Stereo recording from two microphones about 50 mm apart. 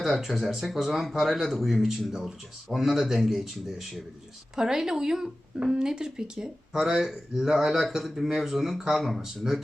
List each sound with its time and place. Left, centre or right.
0.0 s a man's voice: centre
6.8 s a man's voice: centre